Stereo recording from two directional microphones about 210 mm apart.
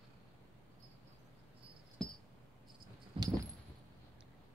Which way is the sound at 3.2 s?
25° right (ahead or behind).